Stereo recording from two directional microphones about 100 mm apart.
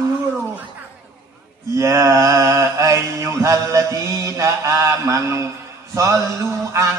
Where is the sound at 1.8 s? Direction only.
30° right (ahead or behind).